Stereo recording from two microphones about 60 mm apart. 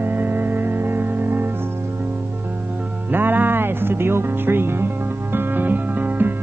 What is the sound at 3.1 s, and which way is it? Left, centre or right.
Speech, right.